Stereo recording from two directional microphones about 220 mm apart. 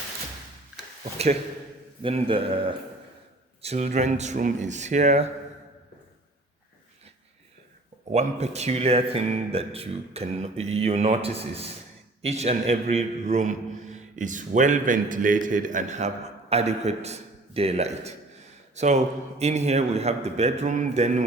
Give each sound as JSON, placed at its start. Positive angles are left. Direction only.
{"t": 2.0, "sound": "a man's voice", "side_deg": -25}
{"t": 8.1, "sound": "a man's voice", "side_deg": -30}